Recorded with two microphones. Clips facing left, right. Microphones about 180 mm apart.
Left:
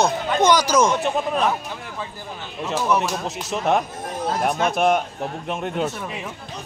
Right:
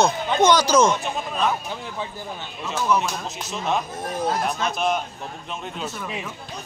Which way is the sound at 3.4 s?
70° left (ahead or behind).